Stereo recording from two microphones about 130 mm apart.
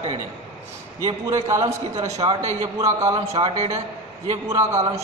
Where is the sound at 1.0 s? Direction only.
25° right (ahead or behind).